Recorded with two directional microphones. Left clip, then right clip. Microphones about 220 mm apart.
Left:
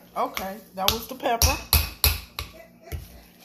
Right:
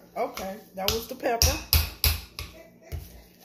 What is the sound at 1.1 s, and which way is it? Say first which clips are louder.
Speech: left 1 dB; 15° right (ahead or behind).